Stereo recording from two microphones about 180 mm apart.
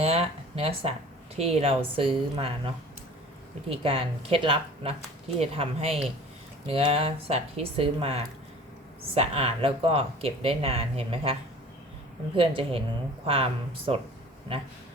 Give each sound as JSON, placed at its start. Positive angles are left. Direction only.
{"t": 0.0, "sound": "a sound", "side_deg": -35}
{"t": 1.4, "sound": "speech", "side_deg": -35}
{"t": 3.7, "sound": "speech", "side_deg": -30}
{"t": 12.4, "sound": "a woman's voice", "side_deg": -30}